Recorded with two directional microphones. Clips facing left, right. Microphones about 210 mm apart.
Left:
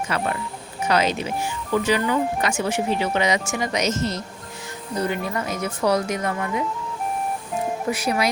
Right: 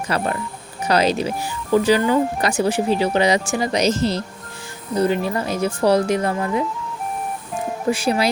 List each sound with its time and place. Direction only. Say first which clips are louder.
0.1 s speech: right 5 dB; 35° right (ahead or behind)
7.9 s speech: right 5 dB; 30° right (ahead or behind)